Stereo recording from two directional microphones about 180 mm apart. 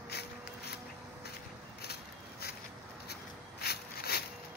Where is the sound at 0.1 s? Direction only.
65° left (ahead or behind).